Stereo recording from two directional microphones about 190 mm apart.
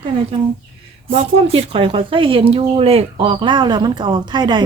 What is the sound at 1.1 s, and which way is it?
Speech, 30° right (ahead or behind).